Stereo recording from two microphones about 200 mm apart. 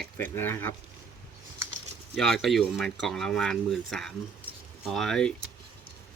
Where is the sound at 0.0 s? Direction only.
10° left (ahead or behind).